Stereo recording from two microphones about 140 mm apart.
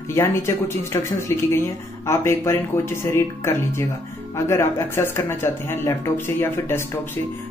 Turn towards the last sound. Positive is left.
turn(degrees=15)  # may be behind; listen again after turning